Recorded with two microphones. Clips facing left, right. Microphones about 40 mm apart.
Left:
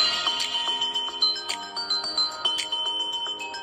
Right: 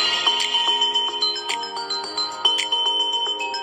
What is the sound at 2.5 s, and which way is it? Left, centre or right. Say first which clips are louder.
Music: right 7 dB; right.